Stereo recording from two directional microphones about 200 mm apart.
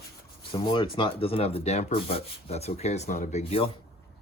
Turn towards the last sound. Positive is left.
turn(degrees=30)  # may be behind; listen again after turning